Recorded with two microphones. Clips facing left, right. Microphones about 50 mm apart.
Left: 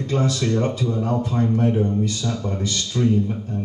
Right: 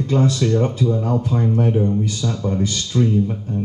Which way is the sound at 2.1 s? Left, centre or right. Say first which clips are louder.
Right 4 dB; right.